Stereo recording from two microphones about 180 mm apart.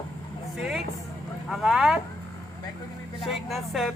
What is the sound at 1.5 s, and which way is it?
Speech, centre (ahead or behind).